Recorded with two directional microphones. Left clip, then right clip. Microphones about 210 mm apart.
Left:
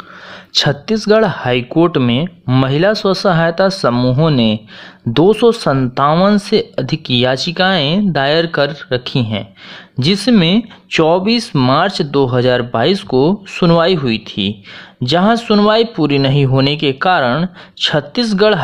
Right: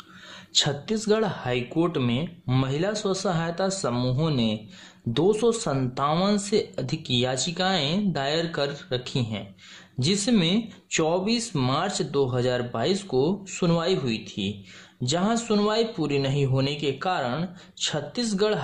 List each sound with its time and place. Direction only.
0.6 s speech: 25° left (ahead or behind)